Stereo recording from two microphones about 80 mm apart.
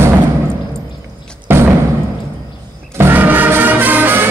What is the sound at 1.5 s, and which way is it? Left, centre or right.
Music, right.